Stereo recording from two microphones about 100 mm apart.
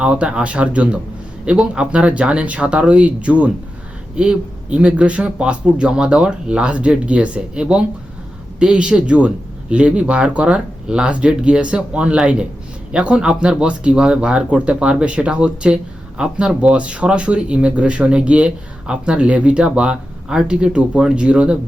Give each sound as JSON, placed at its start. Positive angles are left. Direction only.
{"t": 0.0, "sound": "speech", "side_deg": -10}